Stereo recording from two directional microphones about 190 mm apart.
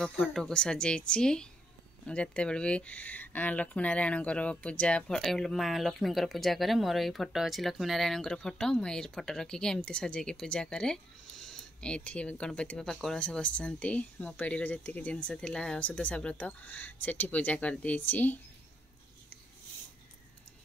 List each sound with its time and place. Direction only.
0.0 s speech: 5° left (ahead or behind)